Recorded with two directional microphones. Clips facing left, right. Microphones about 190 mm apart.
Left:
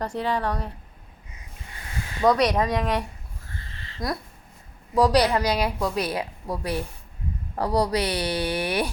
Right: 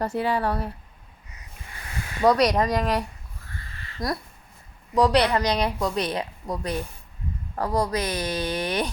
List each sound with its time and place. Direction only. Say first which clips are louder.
0.0 s speech: right 2 dB; 5° right (ahead or behind)
2.2 s speech: right 1 dB; centre (ahead or behind)
3.5 s a sound: even; 25° left (ahead or behind)
4.9 s a woman's voice: even; 10° left (ahead or behind)